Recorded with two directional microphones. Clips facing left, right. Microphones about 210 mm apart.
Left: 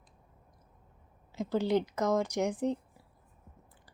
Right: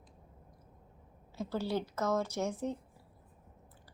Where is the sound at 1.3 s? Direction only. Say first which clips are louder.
Left 6 dB; 15° left (ahead or behind).